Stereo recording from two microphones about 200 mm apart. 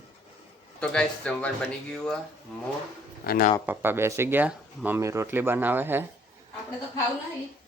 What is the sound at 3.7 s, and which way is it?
Speech, 10° right (ahead or behind).